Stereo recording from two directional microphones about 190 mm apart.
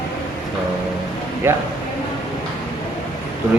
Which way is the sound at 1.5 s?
10° right (ahead or behind).